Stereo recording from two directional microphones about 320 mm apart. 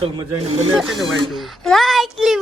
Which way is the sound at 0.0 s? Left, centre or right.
Centre.